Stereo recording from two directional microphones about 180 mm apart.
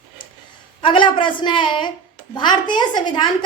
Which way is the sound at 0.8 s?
25° left (ahead or behind).